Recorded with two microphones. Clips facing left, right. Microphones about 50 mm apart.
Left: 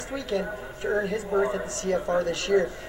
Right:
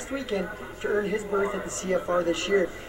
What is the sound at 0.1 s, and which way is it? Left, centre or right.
A man's voice, right.